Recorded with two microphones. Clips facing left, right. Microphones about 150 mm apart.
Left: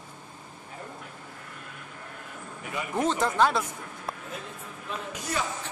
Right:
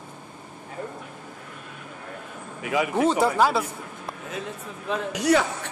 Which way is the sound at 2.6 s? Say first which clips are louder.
Right 11 dB; 90° right.